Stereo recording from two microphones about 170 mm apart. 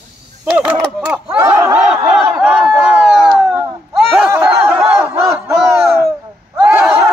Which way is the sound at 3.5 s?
5° right (ahead or behind).